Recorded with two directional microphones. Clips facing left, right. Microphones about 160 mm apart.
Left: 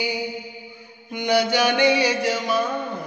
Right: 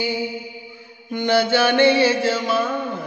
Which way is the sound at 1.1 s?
15° left (ahead or behind).